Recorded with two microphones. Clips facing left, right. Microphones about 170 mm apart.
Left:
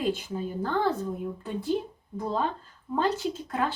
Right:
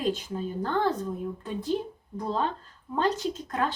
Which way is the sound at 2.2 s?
5° left (ahead or behind).